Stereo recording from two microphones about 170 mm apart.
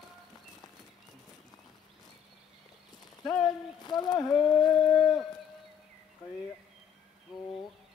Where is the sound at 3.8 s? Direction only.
25° left (ahead or behind).